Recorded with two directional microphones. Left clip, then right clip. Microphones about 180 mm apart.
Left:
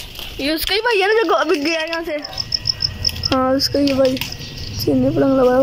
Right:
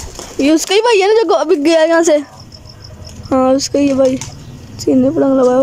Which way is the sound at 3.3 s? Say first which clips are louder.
Right 6 dB; 15° right (ahead or behind).